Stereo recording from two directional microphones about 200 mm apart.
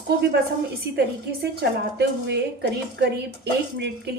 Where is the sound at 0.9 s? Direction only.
55° right (ahead or behind).